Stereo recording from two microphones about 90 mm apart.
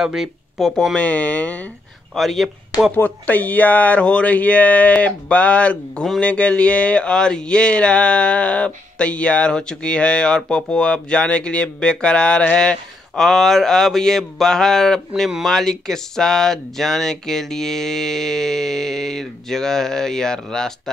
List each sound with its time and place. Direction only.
0.0 s speech: 5° right (ahead or behind); by 1.7 s 15° left (ahead or behind)
2.1 s speech: centre (ahead or behind)
3.0 s speech: 20° left (ahead or behind)